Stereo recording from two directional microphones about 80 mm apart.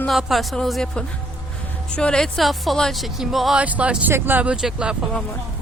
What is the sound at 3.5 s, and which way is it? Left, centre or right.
Speech, centre.